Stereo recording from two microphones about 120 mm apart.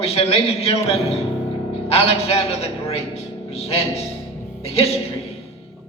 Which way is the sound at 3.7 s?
55° left (ahead or behind).